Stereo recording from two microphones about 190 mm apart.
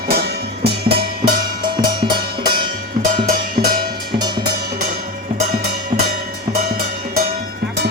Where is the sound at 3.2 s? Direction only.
50° right (ahead or behind).